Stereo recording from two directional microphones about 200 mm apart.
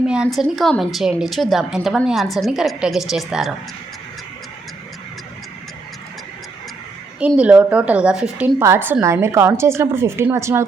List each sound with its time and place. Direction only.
0.0 s a woman's voice: 5° right (ahead or behind)
7.3 s a woman's voice: 5° right (ahead or behind)